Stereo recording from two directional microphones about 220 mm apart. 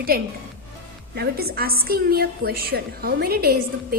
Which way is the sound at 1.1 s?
45° right (ahead or behind).